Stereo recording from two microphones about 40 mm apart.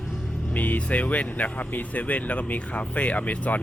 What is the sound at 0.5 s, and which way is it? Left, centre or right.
Speech, left.